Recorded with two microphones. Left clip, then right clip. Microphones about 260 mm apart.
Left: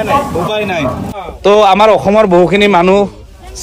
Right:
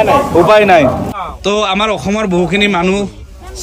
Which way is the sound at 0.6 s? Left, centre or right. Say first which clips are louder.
Right 10 dB; right.